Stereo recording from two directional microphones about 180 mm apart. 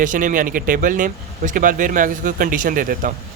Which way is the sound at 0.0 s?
50° right (ahead or behind).